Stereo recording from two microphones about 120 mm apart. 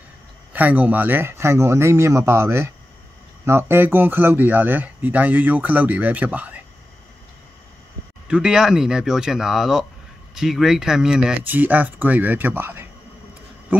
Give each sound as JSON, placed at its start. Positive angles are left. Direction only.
{"t": 0.5, "sound": "speech", "side_deg": -15}
{"t": 8.3, "sound": "speech", "side_deg": -5}
{"t": 13.7, "sound": "a sound", "side_deg": -15}